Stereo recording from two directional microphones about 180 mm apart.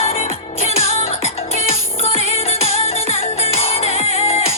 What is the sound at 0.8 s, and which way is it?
Music, 35° left (ahead or behind).